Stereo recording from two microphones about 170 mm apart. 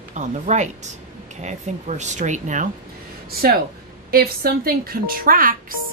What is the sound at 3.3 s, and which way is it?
A woman's voice, 65° right (ahead or behind).